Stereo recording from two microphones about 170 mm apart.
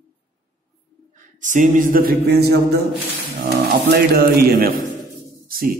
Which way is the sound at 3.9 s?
65° right (ahead or behind).